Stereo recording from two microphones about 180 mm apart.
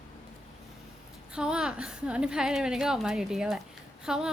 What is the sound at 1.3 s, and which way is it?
A woman's voice, 5° right (ahead or behind).